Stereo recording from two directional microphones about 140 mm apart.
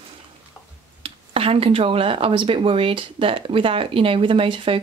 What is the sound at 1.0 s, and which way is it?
Speech, 45° right (ahead or behind).